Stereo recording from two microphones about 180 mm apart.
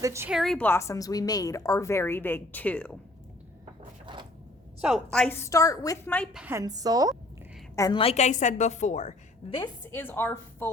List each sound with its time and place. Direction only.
0.0 s a woman's voice: 15° right (ahead or behind)
0.3 s a woman's voice: centre (ahead or behind)
4.0 s a sound: 25° right (ahead or behind)
4.8 s a woman's voice: 5° right (ahead or behind)
5.1 s a woman's voice: 10° left (ahead or behind)
6.3 s a woman's voice: 10° right (ahead or behind)
7.8 s a woman's voice: 25° left (ahead or behind)
9.9 s a woman's voice: 10° left (ahead or behind)